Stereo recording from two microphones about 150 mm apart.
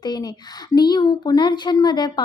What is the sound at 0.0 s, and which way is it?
Speech, 25° left (ahead or behind).